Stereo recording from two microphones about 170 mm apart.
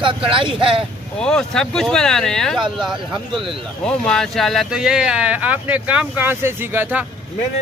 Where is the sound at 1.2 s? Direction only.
5° left (ahead or behind).